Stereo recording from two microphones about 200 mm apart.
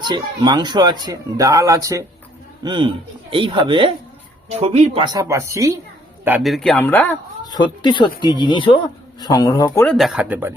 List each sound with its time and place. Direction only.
0.0 s speech: 20° right (ahead or behind)
5.0 s speech: 15° right (ahead or behind)
6.2 s speech: 5° right (ahead or behind)
7.4 s speech: 20° left (ahead or behind)
9.8 s speech: centre (ahead or behind)